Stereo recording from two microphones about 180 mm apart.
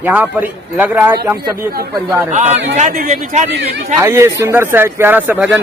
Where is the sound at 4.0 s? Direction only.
15° right (ahead or behind).